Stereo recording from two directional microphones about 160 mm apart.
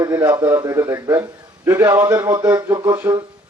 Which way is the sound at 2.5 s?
25° right (ahead or behind).